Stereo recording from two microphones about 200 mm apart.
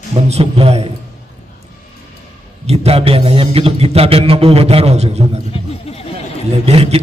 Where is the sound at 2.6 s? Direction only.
30° right (ahead or behind).